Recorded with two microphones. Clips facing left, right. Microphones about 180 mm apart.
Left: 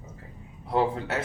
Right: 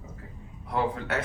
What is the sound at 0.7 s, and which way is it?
Speech, 30° left (ahead or behind).